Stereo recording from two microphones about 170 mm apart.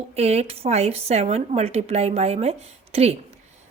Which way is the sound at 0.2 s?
40° right (ahead or behind).